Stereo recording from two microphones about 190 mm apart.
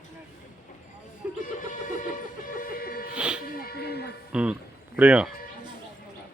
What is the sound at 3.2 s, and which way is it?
Music, 5° right (ahead or behind).